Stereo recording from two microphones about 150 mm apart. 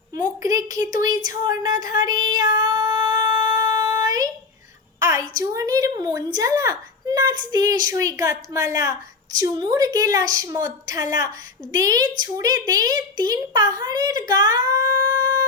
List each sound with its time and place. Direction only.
0.2 s a child's voice: 25° right (ahead or behind)
2.6 s child singing: 25° right (ahead or behind)
4.9 s a sound: 20° right (ahead or behind)
5.4 s a child's voice: 20° right (ahead or behind)